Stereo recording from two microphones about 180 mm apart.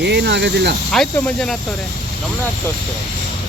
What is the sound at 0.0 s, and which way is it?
Speech, 70° right (ahead or behind).